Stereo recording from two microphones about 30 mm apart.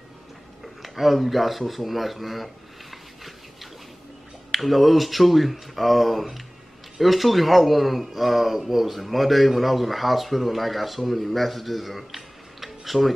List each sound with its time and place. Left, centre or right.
0.8 s speech: centre
1.6 s a sound: centre
4.5 s speech: centre